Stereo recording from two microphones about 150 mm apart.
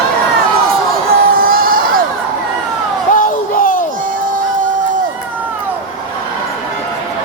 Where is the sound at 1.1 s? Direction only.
75° right (ahead or behind).